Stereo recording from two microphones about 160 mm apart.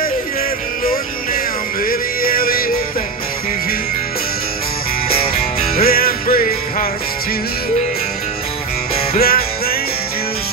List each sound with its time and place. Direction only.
1.9 s music: 65° left (ahead or behind)
5.3 s music: 65° left (ahead or behind)
9.1 s music: 70° left (ahead or behind)